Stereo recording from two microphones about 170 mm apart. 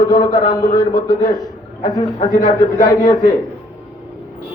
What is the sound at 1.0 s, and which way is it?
Speech, 55° left (ahead or behind).